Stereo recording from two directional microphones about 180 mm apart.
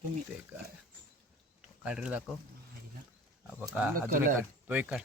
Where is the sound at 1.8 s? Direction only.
5° right (ahead or behind).